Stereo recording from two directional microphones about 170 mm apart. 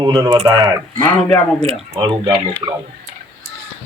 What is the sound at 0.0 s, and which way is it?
Speech, 25° right (ahead or behind).